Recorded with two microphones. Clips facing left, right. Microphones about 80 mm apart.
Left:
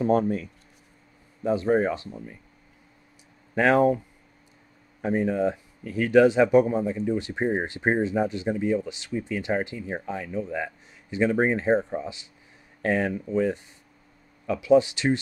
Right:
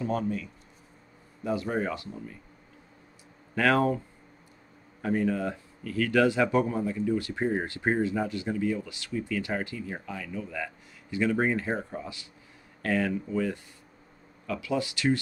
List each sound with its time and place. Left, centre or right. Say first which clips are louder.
0.0 s speech: left 7 dB; left
1.4 s speech: left 7 dB; left
3.5 s speech: left 4 dB; left
5.0 s speech: left 4 dB; left